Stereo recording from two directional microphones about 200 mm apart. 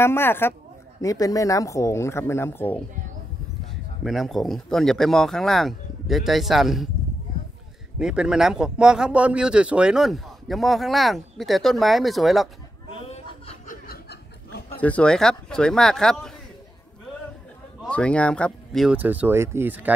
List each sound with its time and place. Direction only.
0.0 s speech: 10° left (ahead or behind)
4.0 s speech: centre (ahead or behind)
8.0 s speech: 5° right (ahead or behind)
13.1 s chuckle: 30° left (ahead or behind)
13.8 s chuckle: 55° left (ahead or behind)
14.8 s speech: 5° left (ahead or behind)
17.8 s speech: 5° left (ahead or behind)